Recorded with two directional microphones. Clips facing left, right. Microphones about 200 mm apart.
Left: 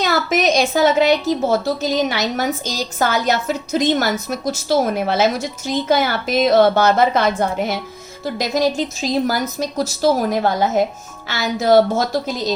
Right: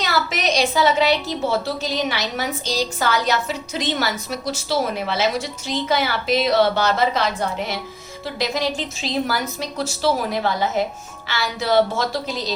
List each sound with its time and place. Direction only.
0.0 s a woman's voice: 50° left (ahead or behind)